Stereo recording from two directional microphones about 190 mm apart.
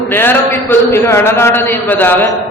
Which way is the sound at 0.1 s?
10° left (ahead or behind).